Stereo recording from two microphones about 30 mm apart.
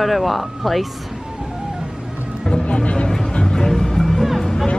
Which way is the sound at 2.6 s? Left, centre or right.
Left.